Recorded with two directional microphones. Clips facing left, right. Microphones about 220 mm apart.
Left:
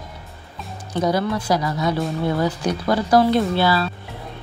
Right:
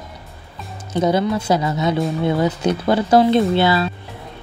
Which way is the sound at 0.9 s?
25° right (ahead or behind).